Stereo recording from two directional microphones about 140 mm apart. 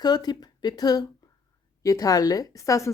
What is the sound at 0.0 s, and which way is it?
A woman's voice, 30° left (ahead or behind).